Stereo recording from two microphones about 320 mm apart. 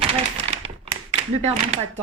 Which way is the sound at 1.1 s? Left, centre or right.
Centre.